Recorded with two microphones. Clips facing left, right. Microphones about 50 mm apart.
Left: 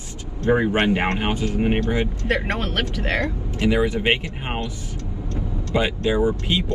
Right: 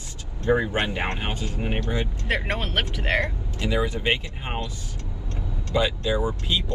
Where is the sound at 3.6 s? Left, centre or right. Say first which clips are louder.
Left 5 dB; left.